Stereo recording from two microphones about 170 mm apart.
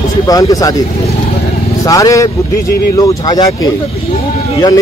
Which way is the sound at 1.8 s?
20° left (ahead or behind).